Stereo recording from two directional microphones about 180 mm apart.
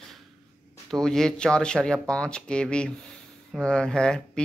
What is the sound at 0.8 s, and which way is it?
Speech, centre (ahead or behind).